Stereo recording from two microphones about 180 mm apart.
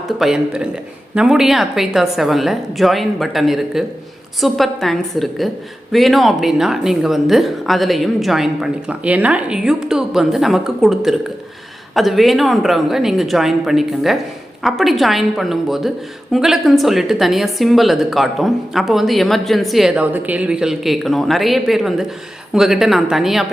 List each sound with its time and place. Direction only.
0.2 s a woman's voice: 5° right (ahead or behind)